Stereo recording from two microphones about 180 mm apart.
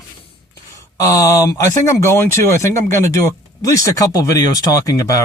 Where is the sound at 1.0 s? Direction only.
20° left (ahead or behind).